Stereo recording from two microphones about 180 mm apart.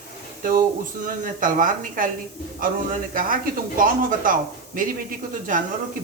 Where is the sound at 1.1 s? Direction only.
50° right (ahead or behind).